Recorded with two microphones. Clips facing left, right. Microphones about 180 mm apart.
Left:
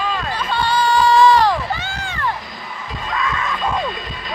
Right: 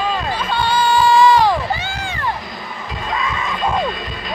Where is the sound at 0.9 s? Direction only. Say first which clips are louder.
Even; 5° right (ahead or behind).